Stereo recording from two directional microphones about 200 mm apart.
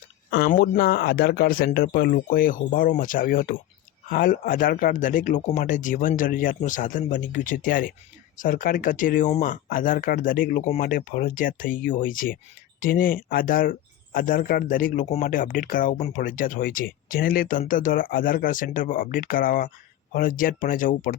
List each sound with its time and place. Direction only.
0.3 s speech: 60° left (ahead or behind)
0.5 s speech: 45° left (ahead or behind)